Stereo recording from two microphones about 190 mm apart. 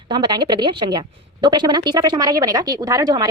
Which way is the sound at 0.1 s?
25° right (ahead or behind).